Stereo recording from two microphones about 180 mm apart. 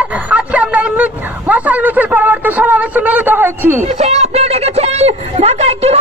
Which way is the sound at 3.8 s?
35° right (ahead or behind).